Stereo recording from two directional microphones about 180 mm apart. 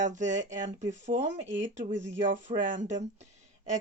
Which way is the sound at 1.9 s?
90° right.